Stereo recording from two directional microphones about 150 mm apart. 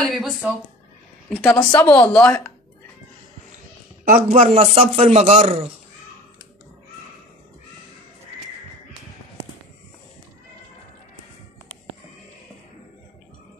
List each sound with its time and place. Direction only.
0.1 s speech: centre (ahead or behind)
1.3 s a woman's voice: 15° left (ahead or behind)
4.1 s speech: 50° right (ahead or behind)